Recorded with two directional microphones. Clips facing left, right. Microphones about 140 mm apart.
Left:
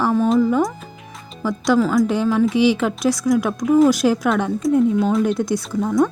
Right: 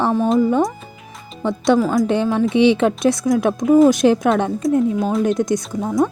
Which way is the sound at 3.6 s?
Centre (ahead or behind).